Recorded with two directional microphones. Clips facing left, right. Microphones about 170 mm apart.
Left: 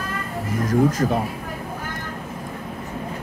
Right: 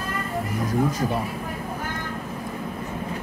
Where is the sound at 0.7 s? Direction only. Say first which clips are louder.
Left 6 dB; 90° left.